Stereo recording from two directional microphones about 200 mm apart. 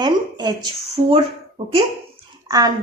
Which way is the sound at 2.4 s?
20° right (ahead or behind).